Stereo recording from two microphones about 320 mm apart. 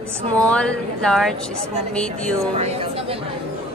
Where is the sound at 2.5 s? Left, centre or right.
Centre.